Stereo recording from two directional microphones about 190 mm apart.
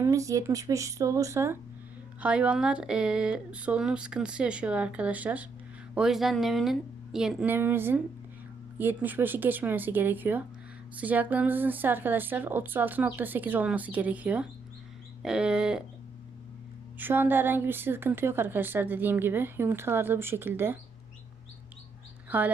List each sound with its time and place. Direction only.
0.0 s a woman's voice: 15° right (ahead or behind)
17.0 s a woman's voice: 10° right (ahead or behind)
22.3 s speech: 10° right (ahead or behind)